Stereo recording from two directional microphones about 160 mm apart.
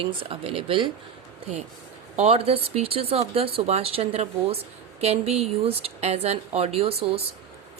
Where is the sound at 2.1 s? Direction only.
45° right (ahead or behind).